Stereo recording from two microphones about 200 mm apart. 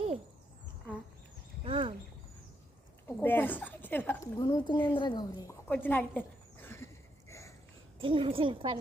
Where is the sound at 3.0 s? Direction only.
10° left (ahead or behind).